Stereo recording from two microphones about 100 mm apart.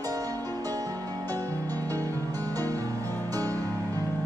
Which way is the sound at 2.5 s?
35° right (ahead or behind).